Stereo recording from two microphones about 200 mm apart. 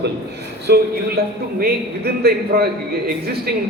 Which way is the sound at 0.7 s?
50° right (ahead or behind).